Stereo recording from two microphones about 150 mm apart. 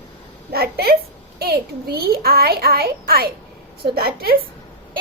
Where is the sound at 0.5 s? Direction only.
90° right.